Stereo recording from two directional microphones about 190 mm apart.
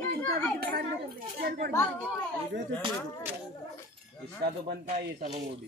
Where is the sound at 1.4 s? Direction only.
55° right (ahead or behind).